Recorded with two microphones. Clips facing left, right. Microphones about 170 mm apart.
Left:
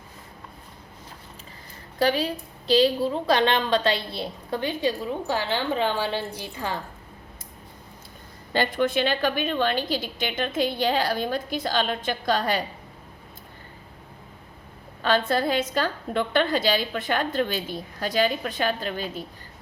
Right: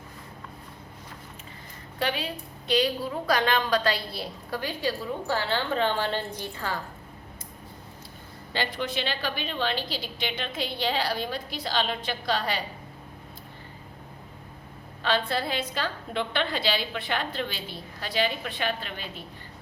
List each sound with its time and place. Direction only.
2.0 s a woman's voice: 40° left (ahead or behind); by 6.7 s 15° left (ahead or behind)
8.5 s a woman's voice: 50° left (ahead or behind)
15.0 s a woman's voice: 45° left (ahead or behind)